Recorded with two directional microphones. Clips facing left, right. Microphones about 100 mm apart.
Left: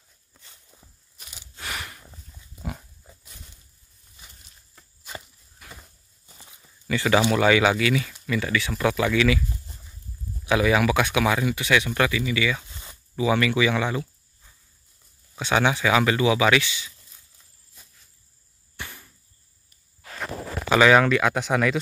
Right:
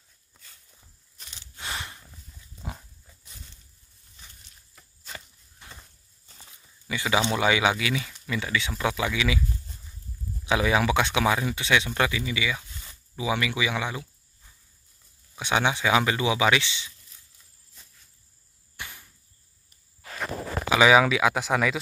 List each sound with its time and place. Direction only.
0.4 s walk: 20° left (ahead or behind)
1.1 s gasp: 5° left (ahead or behind)
1.6 s a sound: 20° right (ahead or behind)
2.6 s pig: 10° left (ahead or behind)
5.7 s a sound: 10° left (ahead or behind)
6.9 s speech: 15° right (ahead or behind)
10.4 s speech: 20° right (ahead or behind)
12.6 s a sound: 25° left (ahead or behind)
13.1 s speech: 15° right (ahead or behind)
15.3 s speech: 15° right (ahead or behind)
20.7 s speech: 5° right (ahead or behind)